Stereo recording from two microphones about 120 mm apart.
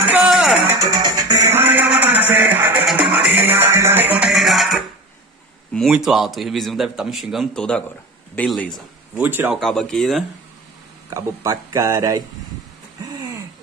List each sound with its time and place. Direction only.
0.2 s music: centre (ahead or behind)
0.7 s music: 30° right (ahead or behind); by 4.3 s 15° right (ahead or behind)
4.3 s music: centre (ahead or behind)
5.9 s a man's voice: 5° right (ahead or behind)
9.1 s speech: 15° right (ahead or behind)
9.6 s a man's voice: 5° left (ahead or behind)
11.1 s speech: 25° right (ahead or behind)
13.0 s a sound: 30° right (ahead or behind)